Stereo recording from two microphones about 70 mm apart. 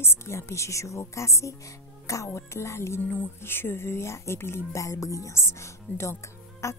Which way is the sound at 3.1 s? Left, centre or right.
Left.